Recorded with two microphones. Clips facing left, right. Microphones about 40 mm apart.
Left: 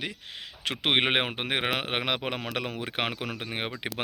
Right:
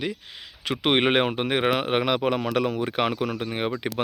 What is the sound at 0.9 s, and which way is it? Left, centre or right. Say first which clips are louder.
Speech: right 4 dB; left.